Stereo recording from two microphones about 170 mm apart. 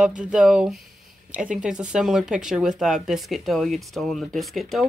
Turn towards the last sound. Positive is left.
turn(degrees=0)  # may be behind; listen again after turning